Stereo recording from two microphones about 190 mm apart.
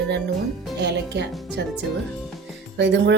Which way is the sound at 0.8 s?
65° right (ahead or behind).